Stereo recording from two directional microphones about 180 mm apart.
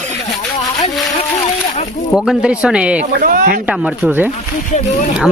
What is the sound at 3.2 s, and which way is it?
Speech, 50° right (ahead or behind).